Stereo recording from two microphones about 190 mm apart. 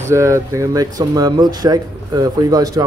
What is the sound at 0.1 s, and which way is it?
Speech, 15° right (ahead or behind).